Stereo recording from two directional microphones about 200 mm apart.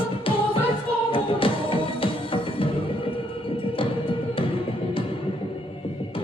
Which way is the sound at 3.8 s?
25° left (ahead or behind).